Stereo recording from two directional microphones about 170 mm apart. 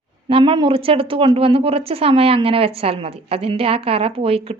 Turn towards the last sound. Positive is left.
turn(degrees=-35)  # may be behind; listen again after turning